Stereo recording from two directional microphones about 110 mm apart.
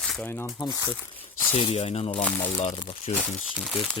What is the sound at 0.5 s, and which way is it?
Speech, 35° left (ahead or behind).